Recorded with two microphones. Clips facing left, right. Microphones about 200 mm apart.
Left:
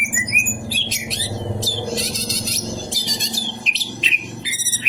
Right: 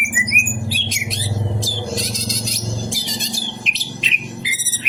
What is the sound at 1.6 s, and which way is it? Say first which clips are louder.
Music: left 1 dB; centre (ahead or behind).